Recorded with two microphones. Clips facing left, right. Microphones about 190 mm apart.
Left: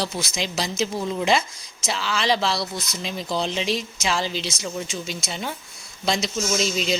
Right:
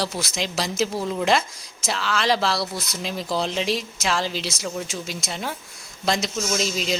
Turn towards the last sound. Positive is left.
turn(degrees=0)  # may be behind; listen again after turning